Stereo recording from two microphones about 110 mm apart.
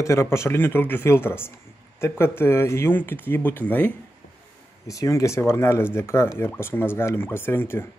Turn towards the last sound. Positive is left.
turn(degrees=20)  # may be behind; listen again after turning